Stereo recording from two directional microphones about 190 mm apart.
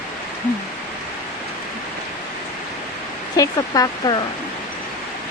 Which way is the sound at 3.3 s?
20° left (ahead or behind).